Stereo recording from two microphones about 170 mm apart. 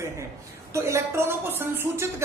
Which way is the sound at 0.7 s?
15° right (ahead or behind).